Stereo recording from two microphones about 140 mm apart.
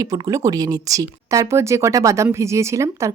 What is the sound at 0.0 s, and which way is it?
Speech, 25° right (ahead or behind).